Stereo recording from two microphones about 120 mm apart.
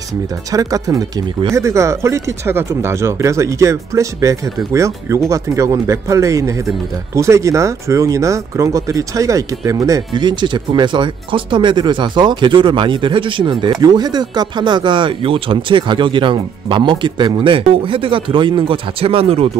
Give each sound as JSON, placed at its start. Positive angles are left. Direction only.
{"t": 0.5, "sound": "speech", "side_deg": -30}